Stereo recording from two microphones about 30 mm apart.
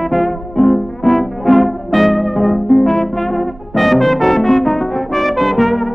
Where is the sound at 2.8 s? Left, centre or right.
Centre.